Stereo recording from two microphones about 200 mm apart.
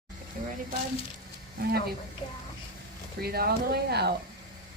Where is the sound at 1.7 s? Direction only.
50° right (ahead or behind).